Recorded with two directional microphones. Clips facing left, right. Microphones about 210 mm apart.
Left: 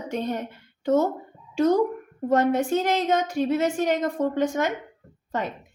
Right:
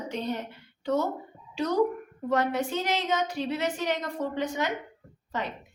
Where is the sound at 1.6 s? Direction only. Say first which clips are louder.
Left 5 dB; 50° left (ahead or behind).